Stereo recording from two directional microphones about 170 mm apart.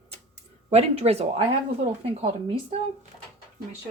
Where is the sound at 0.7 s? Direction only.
40° right (ahead or behind).